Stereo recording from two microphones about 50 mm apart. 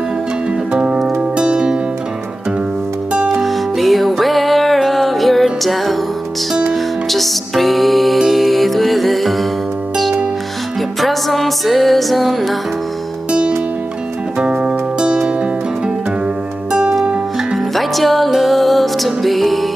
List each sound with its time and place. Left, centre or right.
0.7 s music: centre
3.3 s music: centre
7.1 s music: centre
11.0 s music: centre
14.4 s music: centre
17.0 s music: right
17.7 s music: centre